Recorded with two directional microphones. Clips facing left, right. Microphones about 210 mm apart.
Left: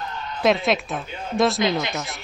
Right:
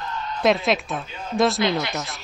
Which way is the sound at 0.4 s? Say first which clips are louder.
Even; centre (ahead or behind).